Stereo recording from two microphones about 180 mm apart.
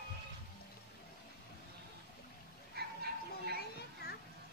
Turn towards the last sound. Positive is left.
turn(degrees=-60)  # may be behind; listen again after turning